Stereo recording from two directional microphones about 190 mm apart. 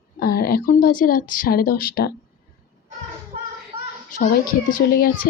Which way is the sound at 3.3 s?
40° right (ahead or behind).